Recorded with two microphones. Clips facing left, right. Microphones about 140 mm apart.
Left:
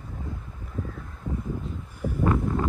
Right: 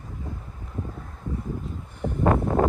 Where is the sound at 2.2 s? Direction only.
50° right (ahead or behind).